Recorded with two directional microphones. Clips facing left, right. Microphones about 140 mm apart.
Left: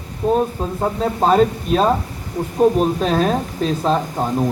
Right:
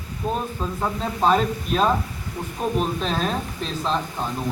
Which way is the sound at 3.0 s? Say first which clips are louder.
Left 7 dB; 45° left (ahead or behind).